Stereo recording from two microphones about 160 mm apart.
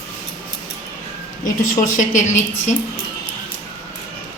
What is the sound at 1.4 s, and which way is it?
A woman's voice, 55° left (ahead or behind).